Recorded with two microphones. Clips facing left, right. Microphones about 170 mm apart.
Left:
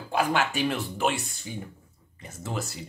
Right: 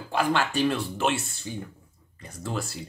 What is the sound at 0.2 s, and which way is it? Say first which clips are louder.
A man's voice: right 2 dB; 20° left (ahead or behind).